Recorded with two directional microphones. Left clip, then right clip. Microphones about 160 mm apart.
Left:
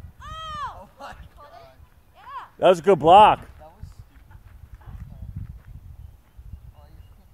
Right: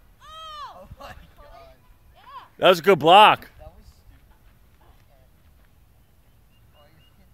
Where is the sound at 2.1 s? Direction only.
5° right (ahead or behind).